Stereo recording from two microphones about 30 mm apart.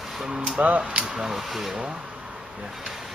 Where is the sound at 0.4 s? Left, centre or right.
Right.